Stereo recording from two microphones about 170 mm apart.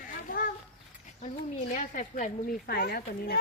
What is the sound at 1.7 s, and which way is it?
Speech, 50° left (ahead or behind).